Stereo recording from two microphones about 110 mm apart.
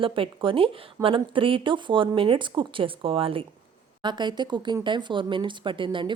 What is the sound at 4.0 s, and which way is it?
A woman's voice, 45° right (ahead or behind).